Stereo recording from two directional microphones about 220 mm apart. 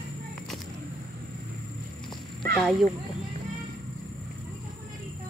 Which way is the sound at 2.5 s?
Centre (ahead or behind).